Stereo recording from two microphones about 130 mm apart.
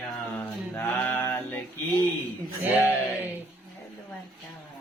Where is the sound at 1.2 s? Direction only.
15° left (ahead or behind).